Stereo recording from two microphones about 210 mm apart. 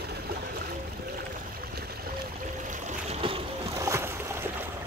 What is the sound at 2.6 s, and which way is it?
Boat, 35° right (ahead or behind).